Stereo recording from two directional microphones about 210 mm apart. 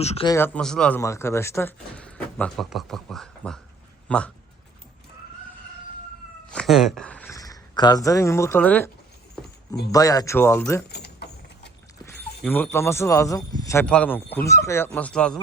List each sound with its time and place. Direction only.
0.0 s speech: 30° left (ahead or behind)
0.3 s speech: 10° left (ahead or behind)
6.5 s speech: centre (ahead or behind)
9.9 s speech: 15° left (ahead or behind)
10.8 s a sound: 50° left (ahead or behind)
12.4 s speech: 5° left (ahead or behind)